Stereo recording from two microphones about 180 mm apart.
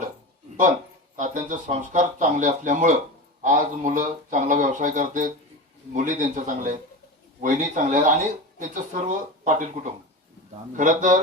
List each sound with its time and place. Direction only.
1.1 s speech: 45° right (ahead or behind)
10.8 s speech: 45° right (ahead or behind)